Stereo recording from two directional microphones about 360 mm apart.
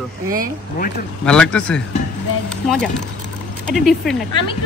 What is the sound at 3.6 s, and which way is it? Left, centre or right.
Speech, centre.